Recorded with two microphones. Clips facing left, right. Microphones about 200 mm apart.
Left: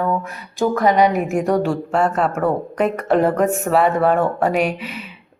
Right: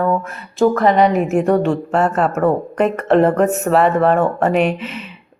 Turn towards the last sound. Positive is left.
turn(degrees=5)  # may be behind; listen again after turning